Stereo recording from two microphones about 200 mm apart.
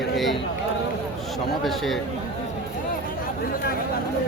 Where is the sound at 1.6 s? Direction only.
Centre (ahead or behind).